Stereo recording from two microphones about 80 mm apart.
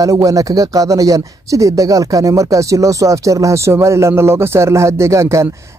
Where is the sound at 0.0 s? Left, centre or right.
Right.